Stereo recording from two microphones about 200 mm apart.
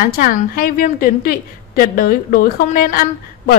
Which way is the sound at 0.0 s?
45° left (ahead or behind).